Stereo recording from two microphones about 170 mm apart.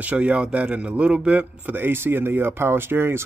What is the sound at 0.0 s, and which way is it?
A man's voice, 10° right (ahead or behind).